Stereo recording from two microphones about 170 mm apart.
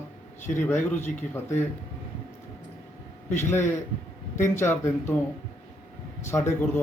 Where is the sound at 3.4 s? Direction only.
15° left (ahead or behind).